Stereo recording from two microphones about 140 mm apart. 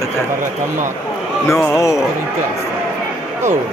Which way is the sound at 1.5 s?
20° left (ahead or behind).